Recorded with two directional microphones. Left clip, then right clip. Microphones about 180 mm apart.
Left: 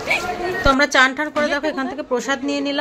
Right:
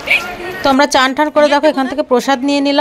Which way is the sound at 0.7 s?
35° right (ahead or behind).